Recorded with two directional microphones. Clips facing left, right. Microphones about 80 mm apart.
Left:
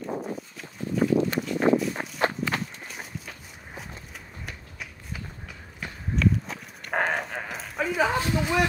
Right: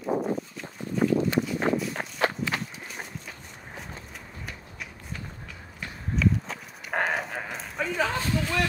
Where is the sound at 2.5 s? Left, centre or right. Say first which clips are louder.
Left 1 dB; centre.